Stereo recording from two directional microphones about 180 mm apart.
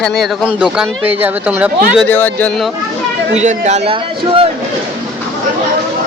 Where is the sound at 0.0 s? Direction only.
Centre (ahead or behind).